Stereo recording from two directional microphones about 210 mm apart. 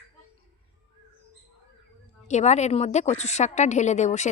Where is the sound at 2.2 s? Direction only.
35° left (ahead or behind).